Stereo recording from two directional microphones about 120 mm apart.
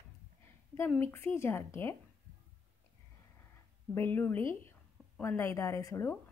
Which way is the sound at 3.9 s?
15° left (ahead or behind).